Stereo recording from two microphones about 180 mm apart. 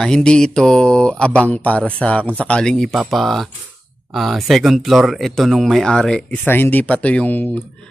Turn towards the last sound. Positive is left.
turn(degrees=10)  # may be behind; listen again after turning